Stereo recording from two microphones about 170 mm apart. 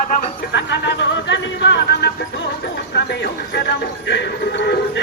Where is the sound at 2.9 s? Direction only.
75° left (ahead or behind).